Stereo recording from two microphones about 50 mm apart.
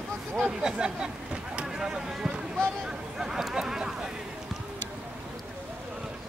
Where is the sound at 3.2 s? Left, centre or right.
Centre.